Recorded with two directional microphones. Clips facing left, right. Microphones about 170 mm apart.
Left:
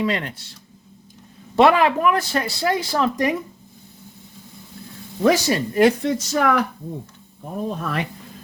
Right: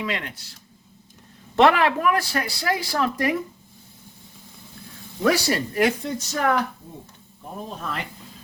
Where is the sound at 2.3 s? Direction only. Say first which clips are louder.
Left 4 dB; 25° left (ahead or behind).